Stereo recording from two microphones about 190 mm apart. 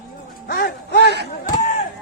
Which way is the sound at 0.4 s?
55° left (ahead or behind).